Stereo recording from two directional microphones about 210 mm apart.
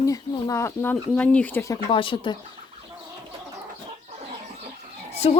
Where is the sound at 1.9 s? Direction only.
25° left (ahead or behind).